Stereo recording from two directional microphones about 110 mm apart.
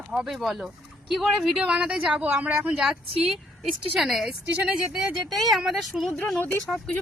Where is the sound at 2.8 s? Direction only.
Centre (ahead or behind).